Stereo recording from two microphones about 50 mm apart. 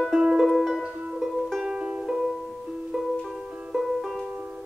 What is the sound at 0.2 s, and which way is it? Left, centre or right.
Music, centre.